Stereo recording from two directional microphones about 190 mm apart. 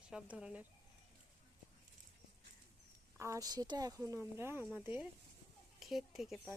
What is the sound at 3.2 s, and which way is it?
Speech, 15° right (ahead or behind).